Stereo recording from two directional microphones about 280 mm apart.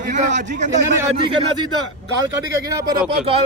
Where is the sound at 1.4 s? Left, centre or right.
Centre.